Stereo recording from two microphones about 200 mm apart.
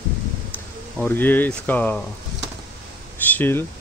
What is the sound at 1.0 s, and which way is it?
Speech, 10° left (ahead or behind).